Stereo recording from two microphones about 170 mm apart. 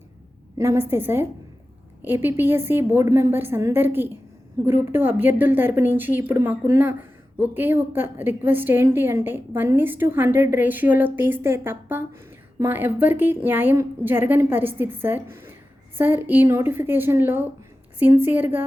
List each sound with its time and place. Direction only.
0.6 s a woman's voice: 15° right (ahead or behind)